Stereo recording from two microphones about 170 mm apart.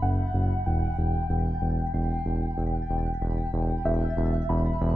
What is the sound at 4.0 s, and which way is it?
Music, 5° right (ahead or behind).